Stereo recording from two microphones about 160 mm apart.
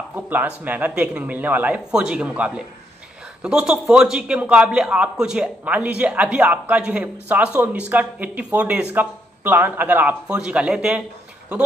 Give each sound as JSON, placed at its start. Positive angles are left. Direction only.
{"t": 0.1, "sound": "a man's voice", "side_deg": -10}